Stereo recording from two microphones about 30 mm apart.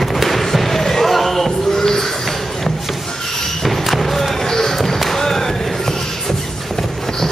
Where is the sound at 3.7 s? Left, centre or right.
Centre.